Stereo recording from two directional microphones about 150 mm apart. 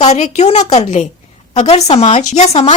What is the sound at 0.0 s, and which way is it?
Speech, 50° left (ahead or behind).